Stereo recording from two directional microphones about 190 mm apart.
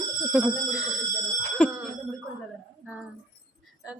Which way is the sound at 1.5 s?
5° left (ahead or behind).